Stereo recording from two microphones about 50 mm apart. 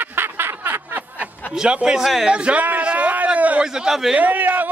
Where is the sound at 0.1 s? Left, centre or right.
Right.